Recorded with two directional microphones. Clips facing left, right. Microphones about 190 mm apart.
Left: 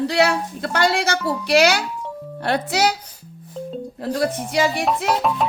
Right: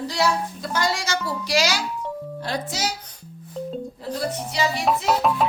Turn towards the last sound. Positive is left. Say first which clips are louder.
# even
turn(degrees=0)  # may be behind; listen again after turning